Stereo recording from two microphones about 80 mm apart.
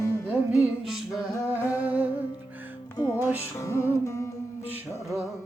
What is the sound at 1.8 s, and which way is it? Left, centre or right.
Humming, right.